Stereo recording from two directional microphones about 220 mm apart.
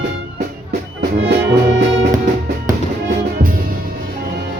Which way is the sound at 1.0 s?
50° right (ahead or behind).